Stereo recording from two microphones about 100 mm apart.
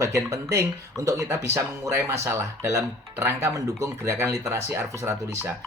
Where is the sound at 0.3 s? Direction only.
30° right (ahead or behind).